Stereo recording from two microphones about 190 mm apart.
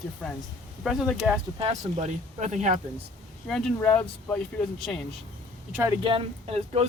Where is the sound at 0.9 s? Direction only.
Centre (ahead or behind).